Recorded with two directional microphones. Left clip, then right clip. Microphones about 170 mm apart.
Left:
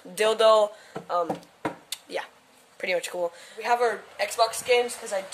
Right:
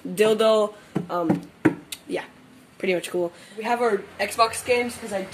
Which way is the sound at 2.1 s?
10° left (ahead or behind).